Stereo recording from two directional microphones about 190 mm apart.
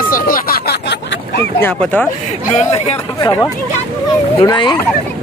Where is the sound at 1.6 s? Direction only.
10° left (ahead or behind).